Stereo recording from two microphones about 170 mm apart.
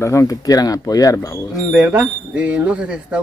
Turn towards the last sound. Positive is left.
turn(degrees=-5)  # may be behind; listen again after turning